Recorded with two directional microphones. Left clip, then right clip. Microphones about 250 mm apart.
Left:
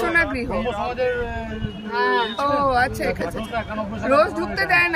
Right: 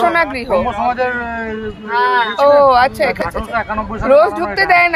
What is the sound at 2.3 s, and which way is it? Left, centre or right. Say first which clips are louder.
Speech: right 11 dB; centre.